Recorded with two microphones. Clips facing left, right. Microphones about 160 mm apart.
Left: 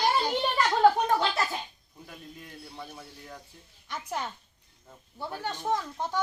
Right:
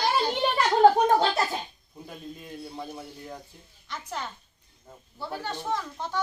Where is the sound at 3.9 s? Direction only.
15° left (ahead or behind).